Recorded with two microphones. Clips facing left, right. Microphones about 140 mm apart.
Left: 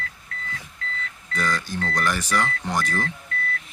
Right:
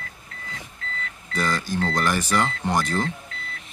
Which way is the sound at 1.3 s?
25° right (ahead or behind).